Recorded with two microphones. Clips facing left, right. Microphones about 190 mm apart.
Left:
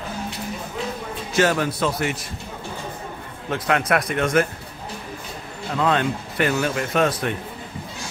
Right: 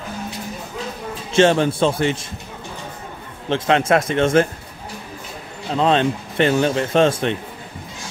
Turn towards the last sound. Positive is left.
turn(degrees=-25)  # may be behind; listen again after turning